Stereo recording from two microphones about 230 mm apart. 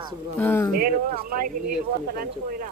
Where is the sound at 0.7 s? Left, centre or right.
Right.